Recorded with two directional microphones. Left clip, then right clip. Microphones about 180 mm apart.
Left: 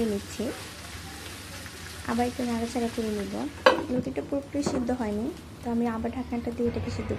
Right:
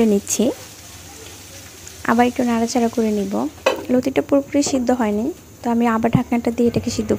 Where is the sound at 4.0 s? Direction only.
55° right (ahead or behind).